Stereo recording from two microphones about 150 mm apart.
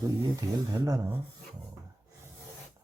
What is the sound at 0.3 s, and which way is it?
Speech, 25° right (ahead or behind).